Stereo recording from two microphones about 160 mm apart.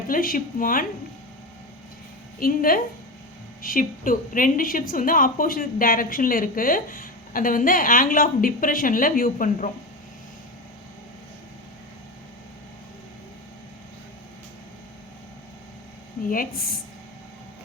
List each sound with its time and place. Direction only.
0.1 s a woman's voice: 60° left (ahead or behind)
2.4 s a woman's voice: 65° left (ahead or behind)
16.3 s a woman's voice: 65° left (ahead or behind)